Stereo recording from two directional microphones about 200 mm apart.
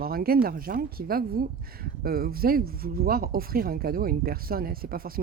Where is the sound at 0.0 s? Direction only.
50° right (ahead or behind).